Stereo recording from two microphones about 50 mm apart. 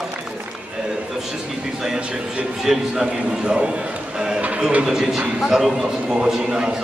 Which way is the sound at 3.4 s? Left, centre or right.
Centre.